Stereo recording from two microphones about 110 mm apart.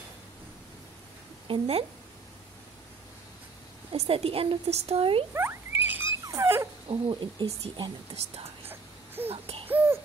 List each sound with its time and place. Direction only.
1.5 s a woman's voice: 65° right (ahead or behind)
3.9 s a woman's voice: 65° right (ahead or behind)
5.3 s rodents: 20° right (ahead or behind)
6.2 s dog: 25° right (ahead or behind)
6.9 s speech: 55° right (ahead or behind)
8.6 s whimper: 20° right (ahead or behind)
9.3 s a sound: 65° right (ahead or behind)
9.7 s a sound: 15° right (ahead or behind)